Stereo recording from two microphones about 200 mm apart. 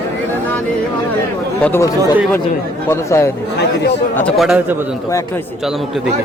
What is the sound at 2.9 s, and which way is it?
Speech, 15° left (ahead or behind).